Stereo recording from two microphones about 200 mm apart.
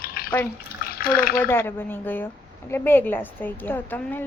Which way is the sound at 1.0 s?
50° left (ahead or behind).